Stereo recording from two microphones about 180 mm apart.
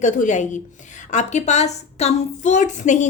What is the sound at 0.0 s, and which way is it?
A woman's voice, 45° left (ahead or behind).